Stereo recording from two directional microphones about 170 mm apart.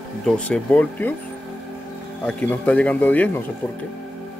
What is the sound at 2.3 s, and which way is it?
Speech, 5° left (ahead or behind).